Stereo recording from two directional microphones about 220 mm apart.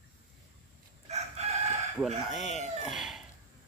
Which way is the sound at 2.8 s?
Centre (ahead or behind).